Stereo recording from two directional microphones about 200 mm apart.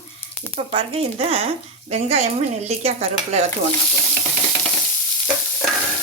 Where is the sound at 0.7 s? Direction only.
30° right (ahead or behind).